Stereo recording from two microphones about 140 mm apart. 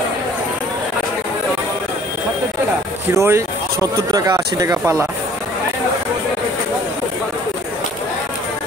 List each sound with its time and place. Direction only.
3.2 s speech: 20° right (ahead or behind)